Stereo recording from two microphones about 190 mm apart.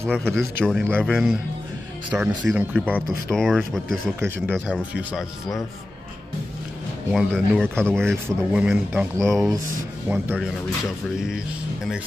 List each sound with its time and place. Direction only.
0.2 s speech: centre (ahead or behind)
3.3 s speech: 5° left (ahead or behind)
7.1 s speech: 5° right (ahead or behind)